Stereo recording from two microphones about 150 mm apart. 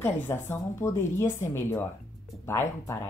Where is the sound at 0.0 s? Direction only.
15° left (ahead or behind).